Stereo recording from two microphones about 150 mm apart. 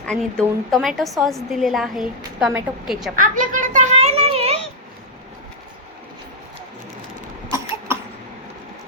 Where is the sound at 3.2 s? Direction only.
60° right (ahead or behind); by 4.5 s 45° right (ahead or behind).